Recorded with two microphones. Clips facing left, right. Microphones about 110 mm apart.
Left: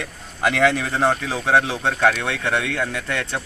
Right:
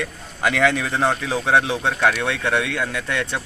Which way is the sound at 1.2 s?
15° right (ahead or behind).